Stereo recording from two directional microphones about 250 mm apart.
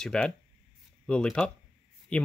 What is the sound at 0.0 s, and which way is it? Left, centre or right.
Speech, centre.